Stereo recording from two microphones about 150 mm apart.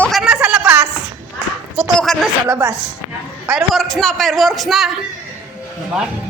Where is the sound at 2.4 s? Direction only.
20° right (ahead or behind).